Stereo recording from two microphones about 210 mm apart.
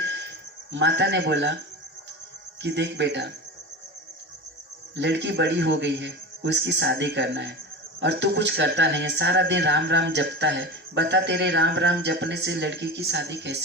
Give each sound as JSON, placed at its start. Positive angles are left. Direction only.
{"t": 0.7, "sound": "speech", "side_deg": -55}
{"t": 2.6, "sound": "speech", "side_deg": -55}
{"t": 4.9, "sound": "speech", "side_deg": -55}